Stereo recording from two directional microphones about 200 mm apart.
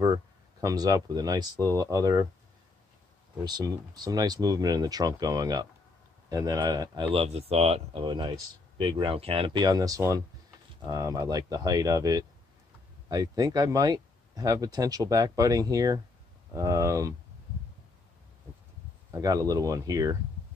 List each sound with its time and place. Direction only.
0.0 s speech: 15° right (ahead or behind)
3.3 s speech: 20° right (ahead or behind)
19.1 s speech: 20° right (ahead or behind)